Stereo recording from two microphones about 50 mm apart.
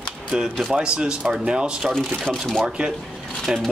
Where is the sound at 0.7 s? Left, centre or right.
Centre.